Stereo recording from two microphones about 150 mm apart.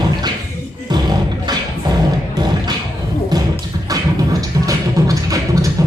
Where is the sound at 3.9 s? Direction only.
25° right (ahead or behind).